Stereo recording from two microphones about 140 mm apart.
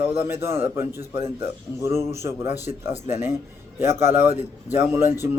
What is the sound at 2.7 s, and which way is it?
Speech, 65° left (ahead or behind).